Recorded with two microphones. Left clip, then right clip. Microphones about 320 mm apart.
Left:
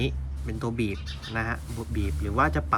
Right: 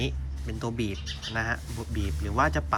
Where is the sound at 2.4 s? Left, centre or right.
Centre.